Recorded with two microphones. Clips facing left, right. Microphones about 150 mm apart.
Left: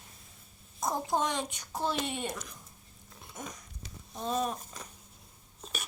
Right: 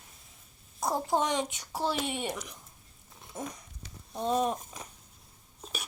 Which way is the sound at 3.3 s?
30° right (ahead or behind).